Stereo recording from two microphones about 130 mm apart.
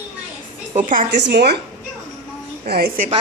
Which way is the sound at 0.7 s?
90° right.